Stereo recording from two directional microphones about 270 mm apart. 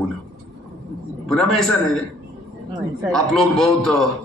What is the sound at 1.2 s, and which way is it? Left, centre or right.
Speech, centre.